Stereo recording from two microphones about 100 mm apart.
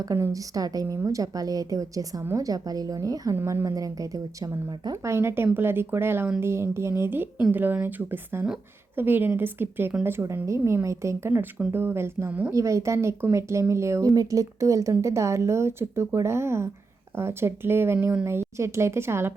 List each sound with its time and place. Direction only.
0.0 s a woman's voice: 35° right (ahead or behind); by 18.3 s 15° right (ahead or behind)
18.3 s speech: 25° right (ahead or behind)